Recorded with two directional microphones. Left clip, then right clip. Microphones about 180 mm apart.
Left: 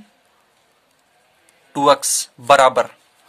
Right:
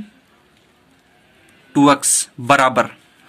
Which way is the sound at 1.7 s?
40° left (ahead or behind).